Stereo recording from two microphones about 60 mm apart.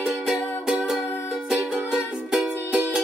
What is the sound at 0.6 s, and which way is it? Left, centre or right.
Music, centre.